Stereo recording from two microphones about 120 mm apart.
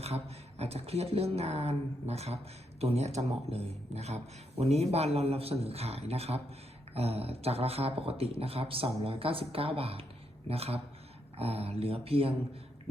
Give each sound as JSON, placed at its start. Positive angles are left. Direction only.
{"t": 0.6, "sound": "a man's voice", "side_deg": -60}